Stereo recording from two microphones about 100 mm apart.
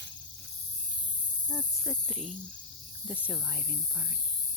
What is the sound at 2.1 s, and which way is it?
Speech, 5° right (ahead or behind).